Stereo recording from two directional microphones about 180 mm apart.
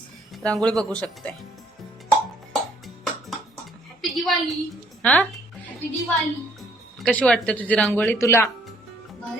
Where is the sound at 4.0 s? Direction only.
Centre (ahead or behind).